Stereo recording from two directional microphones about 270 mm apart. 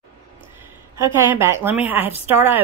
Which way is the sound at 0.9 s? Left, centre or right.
Centre.